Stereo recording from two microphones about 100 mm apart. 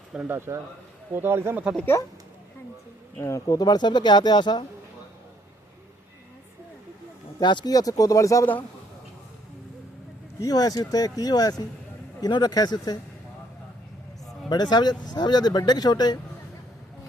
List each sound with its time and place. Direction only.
0.3 s speech: 25° right (ahead or behind)
1.9 s speech: 30° left (ahead or behind)
3.2 s speech: 30° left (ahead or behind); by 4.6 s 45° left (ahead or behind)
7.3 s speech: 45° left (ahead or behind)
10.4 s speech: 40° left (ahead or behind)
14.5 s speech: 45° left (ahead or behind)